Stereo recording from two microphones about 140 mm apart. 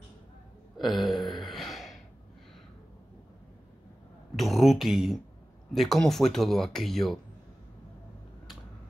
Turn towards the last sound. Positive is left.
turn(degrees=0)  # may be behind; listen again after turning